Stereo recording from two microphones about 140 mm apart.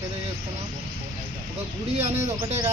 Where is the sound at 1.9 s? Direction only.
50° right (ahead or behind).